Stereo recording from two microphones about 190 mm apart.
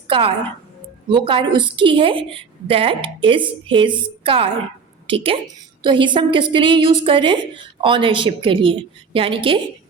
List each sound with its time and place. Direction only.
0.1 s a woman's voice: 30° right (ahead or behind)